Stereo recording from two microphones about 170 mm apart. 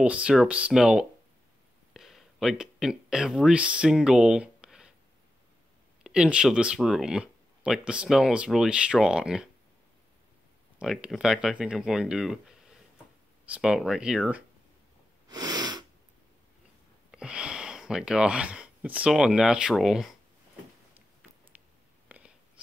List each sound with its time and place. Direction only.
0.0 s speech: 5° right (ahead or behind)
6.0 s speech: 5° right (ahead or behind)
10.8 s speech: 5° right (ahead or behind)
15.2 s sneeze: 25° right (ahead or behind)
17.1 s speech: 5° right (ahead or behind)
20.9 s a sound: 10° right (ahead or behind)